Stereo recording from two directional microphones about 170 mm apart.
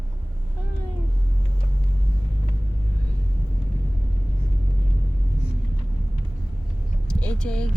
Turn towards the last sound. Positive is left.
turn(degrees=5)  # may be behind; listen again after turning